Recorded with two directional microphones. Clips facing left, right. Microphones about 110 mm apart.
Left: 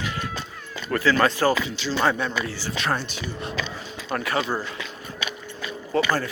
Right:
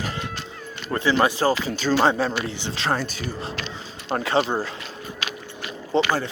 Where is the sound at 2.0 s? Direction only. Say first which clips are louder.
Right 1 dB; 30° right (ahead or behind).